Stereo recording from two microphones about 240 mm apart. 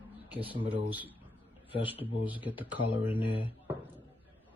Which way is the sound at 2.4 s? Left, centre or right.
Centre.